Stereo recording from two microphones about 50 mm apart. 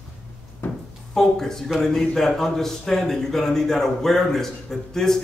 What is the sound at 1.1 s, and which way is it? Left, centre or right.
A man's voice, centre.